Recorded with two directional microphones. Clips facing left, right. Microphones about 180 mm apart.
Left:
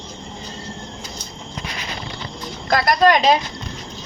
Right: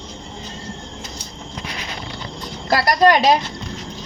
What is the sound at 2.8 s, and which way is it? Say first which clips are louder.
Speech: right 1 dB; 40° right (ahead or behind).